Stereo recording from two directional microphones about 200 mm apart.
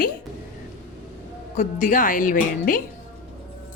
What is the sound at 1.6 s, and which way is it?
A woman's voice, 40° left (ahead or behind).